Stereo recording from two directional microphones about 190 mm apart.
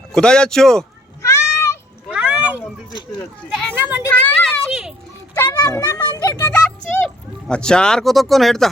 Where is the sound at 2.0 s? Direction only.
5° right (ahead or behind).